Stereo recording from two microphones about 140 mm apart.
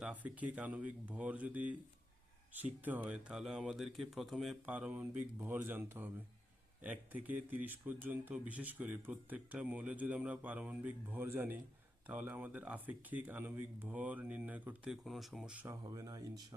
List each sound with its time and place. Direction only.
0.0 s speech: 10° right (ahead or behind)
15.6 s speech: 25° right (ahead or behind)